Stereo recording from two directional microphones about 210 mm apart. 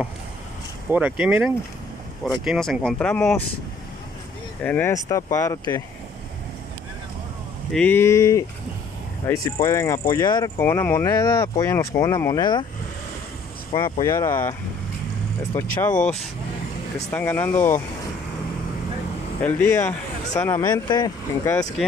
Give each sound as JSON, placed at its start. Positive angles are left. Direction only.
{"t": 0.9, "sound": "speech", "side_deg": -5}
{"t": 4.6, "sound": "speech", "side_deg": 10}
{"t": 7.7, "sound": "speech", "side_deg": 10}
{"t": 13.7, "sound": "speech", "side_deg": 25}
{"t": 15.8, "sound": "speech", "side_deg": 5}
{"t": 19.4, "sound": "speech", "side_deg": 10}